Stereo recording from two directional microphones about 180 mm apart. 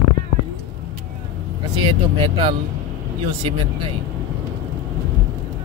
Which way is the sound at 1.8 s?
25° right (ahead or behind).